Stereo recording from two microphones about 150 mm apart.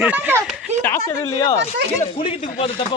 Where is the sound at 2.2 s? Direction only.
40° left (ahead or behind).